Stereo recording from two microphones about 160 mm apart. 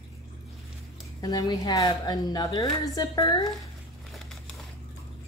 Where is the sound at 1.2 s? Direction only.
25° left (ahead or behind).